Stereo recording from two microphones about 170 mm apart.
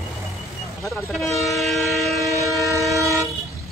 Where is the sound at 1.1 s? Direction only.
Centre (ahead or behind).